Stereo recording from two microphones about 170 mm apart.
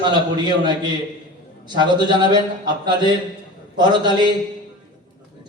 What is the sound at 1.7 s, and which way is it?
A man's voice, 25° right (ahead or behind).